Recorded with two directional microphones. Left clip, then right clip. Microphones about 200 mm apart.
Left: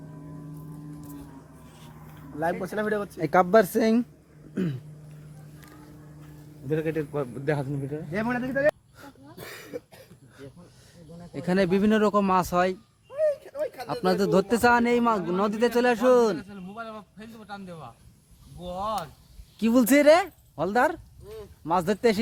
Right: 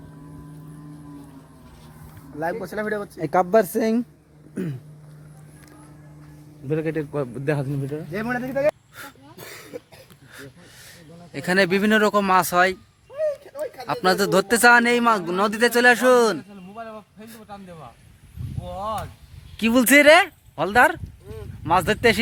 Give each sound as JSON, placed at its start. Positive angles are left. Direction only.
{"t": 2.4, "sound": "speech", "side_deg": -10}
{"t": 6.7, "sound": "a man's voice", "side_deg": -50}
{"t": 8.1, "sound": "a sound", "side_deg": 5}
{"t": 9.7, "sound": "cough", "side_deg": -25}
{"t": 11.3, "sound": "speech", "side_deg": -5}
{"t": 19.5, "sound": "speech", "side_deg": 0}